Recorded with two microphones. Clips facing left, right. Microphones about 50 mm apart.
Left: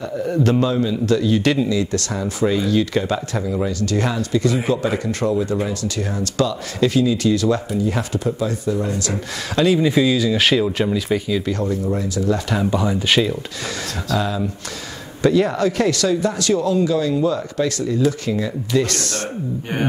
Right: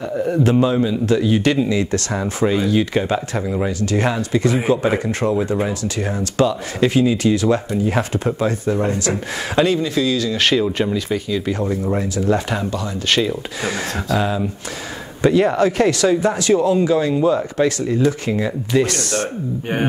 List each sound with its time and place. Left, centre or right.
0.2 s a man's voice: centre
9.8 s speech: centre
11.4 s a man's voice: centre
11.7 s speech: right
12.7 s speech: centre
13.7 s speech: right
18.9 s a man's voice: centre